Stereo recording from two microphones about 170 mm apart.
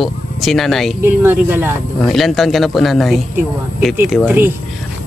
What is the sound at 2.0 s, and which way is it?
Speech, centre (ahead or behind).